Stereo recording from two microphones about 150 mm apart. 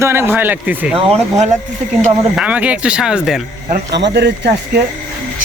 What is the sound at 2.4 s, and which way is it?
Speech, 10° right (ahead or behind).